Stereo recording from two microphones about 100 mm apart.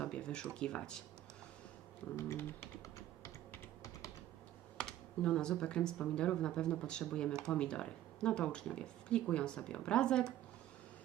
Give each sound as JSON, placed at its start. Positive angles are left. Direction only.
{"t": 0.0, "sound": "speech", "side_deg": 10}
{"t": 2.1, "sound": "typing", "side_deg": 25}
{"t": 4.8, "sound": "speech", "side_deg": 10}